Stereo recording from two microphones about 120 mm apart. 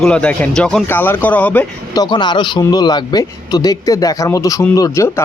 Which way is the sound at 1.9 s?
40° left (ahead or behind).